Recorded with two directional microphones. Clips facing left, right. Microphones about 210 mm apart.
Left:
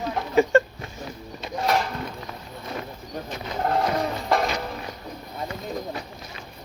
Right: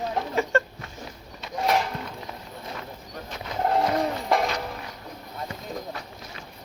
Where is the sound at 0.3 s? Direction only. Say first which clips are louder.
Left 8 dB; 15° left (ahead or behind).